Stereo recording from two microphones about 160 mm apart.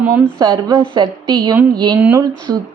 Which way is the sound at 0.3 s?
25° right (ahead or behind).